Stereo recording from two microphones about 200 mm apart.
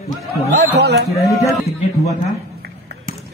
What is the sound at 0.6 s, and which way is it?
Speech, 55° right (ahead or behind).